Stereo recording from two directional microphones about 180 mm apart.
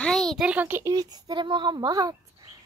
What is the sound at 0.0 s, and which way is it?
A child's voice, 5° left (ahead or behind).